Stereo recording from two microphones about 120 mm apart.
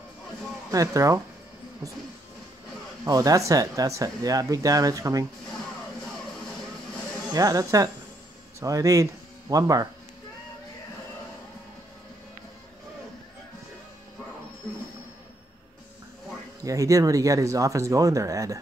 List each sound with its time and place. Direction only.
0.7 s speech: 30° right (ahead or behind)
3.1 s speech: 30° right (ahead or behind)
7.3 s speech: 30° right (ahead or behind)
16.6 s speech: 30° right (ahead or behind)